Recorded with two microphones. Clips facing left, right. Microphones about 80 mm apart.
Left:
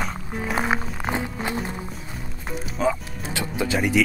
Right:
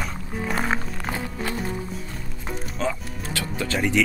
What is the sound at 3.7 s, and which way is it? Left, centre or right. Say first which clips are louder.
Speech: left 1 dB; centre.